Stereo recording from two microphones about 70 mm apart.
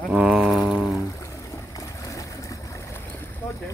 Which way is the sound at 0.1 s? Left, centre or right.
Centre.